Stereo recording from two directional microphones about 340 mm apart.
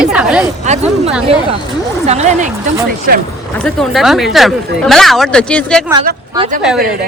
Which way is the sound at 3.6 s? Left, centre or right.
Centre.